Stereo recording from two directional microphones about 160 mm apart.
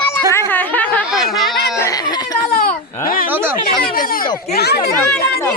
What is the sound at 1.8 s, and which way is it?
Speech, 20° left (ahead or behind).